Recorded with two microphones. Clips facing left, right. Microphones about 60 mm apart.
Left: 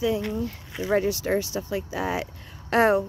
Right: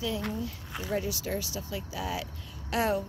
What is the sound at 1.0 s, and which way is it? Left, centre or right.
Speech, left.